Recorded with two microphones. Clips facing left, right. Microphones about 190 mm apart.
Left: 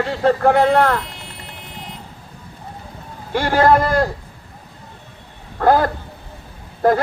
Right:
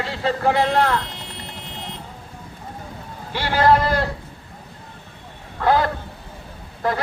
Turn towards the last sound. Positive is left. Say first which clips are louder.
# left 8 dB
turn(degrees=50)  # may be behind; listen again after turning